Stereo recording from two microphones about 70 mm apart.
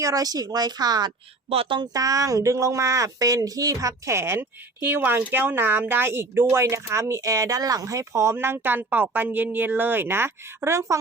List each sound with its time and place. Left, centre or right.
0.0 s speech: right
1.8 s speech: right